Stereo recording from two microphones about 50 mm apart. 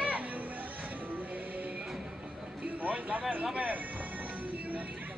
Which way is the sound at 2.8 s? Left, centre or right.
Right.